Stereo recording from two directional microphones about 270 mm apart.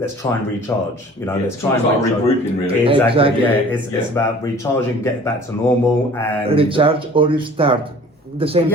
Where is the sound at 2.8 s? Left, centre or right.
Centre.